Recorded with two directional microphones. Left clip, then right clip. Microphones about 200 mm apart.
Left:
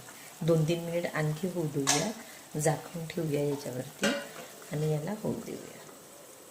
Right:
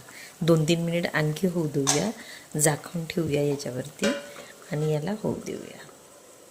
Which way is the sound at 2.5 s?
40° right (ahead or behind).